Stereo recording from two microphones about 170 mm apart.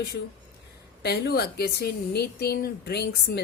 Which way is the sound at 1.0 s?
70° left (ahead or behind).